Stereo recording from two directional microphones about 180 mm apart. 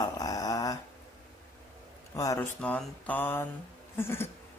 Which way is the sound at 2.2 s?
20° left (ahead or behind).